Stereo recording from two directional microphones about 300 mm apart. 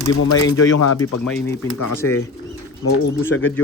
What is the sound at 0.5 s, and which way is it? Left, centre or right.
Speech, left.